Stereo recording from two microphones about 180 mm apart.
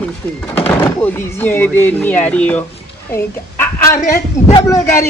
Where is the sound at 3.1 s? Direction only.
15° left (ahead or behind).